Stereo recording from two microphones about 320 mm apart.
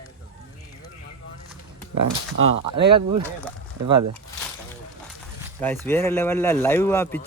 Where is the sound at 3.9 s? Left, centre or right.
Right.